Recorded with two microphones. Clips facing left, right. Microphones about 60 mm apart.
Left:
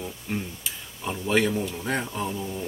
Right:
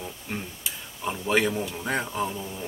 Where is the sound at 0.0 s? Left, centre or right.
Centre.